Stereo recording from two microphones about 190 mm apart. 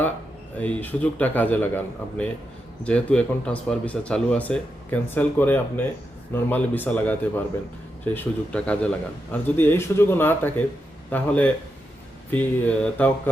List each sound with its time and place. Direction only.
0.6 s speech: 10° left (ahead or behind)